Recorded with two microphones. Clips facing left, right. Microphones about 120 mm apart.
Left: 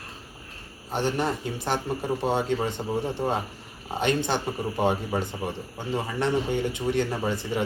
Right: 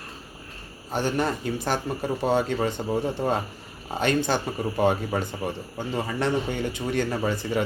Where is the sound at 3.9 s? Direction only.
25° left (ahead or behind).